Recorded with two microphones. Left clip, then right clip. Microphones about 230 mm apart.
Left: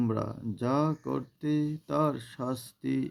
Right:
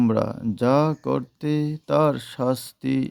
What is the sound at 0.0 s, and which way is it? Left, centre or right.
Speech, right.